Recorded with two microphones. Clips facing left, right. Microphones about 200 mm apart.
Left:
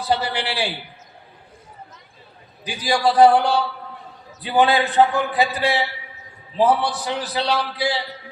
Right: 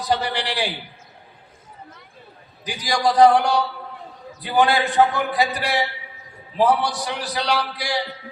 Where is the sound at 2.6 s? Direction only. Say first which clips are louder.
Left 2 dB; 15° right (ahead or behind).